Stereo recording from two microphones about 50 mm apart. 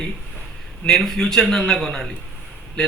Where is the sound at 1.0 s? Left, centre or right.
Centre.